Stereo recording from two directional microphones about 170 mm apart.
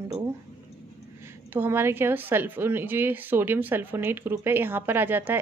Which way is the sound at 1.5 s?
10° right (ahead or behind).